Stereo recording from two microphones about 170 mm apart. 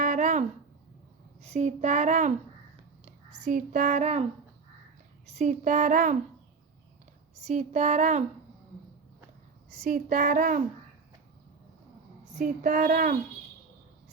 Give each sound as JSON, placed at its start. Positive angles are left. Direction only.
{"t": 0.0, "sound": "a sound", "side_deg": -45}
{"t": 1.4, "sound": "speech", "side_deg": -45}
{"t": 5.3, "sound": "speech", "side_deg": -45}
{"t": 7.4, "sound": "speech", "side_deg": -45}
{"t": 9.8, "sound": "speech", "side_deg": -50}
{"t": 12.3, "sound": "speech", "side_deg": -50}